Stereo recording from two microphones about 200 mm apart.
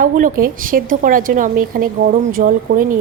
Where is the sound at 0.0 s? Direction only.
45° right (ahead or behind).